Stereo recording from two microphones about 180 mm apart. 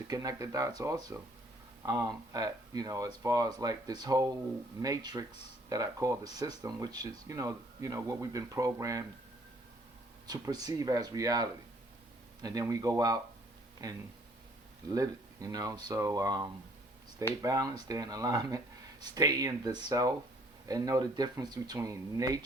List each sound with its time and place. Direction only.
0.1 s speech: 20° right (ahead or behind)
10.2 s speech: 20° right (ahead or behind)